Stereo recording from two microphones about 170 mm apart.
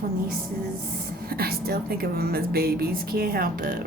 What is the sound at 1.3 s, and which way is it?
A woman's voice, 65° right (ahead or behind).